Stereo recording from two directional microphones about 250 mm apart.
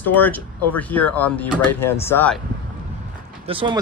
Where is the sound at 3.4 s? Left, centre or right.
Right.